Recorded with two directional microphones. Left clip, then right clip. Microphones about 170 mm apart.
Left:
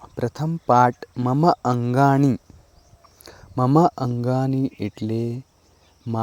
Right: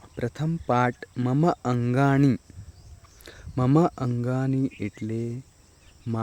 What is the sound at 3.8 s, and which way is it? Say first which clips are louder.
Speech: left 6 dB; 10° left (ahead or behind).